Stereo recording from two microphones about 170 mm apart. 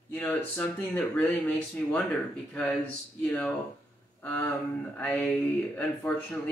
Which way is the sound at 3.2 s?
10° left (ahead or behind).